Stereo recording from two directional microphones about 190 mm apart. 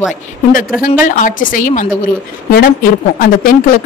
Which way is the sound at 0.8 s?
45° left (ahead or behind).